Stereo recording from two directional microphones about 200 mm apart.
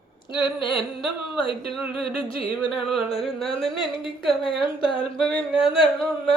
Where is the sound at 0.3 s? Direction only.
25° left (ahead or behind).